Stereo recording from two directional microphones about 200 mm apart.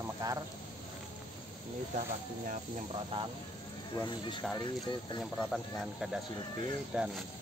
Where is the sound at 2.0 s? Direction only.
40° right (ahead or behind).